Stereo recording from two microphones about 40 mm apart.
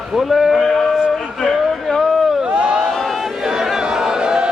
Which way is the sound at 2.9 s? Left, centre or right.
Centre.